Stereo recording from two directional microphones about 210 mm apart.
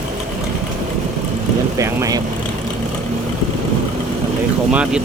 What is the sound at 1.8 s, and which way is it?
Vehicle, 15° right (ahead or behind).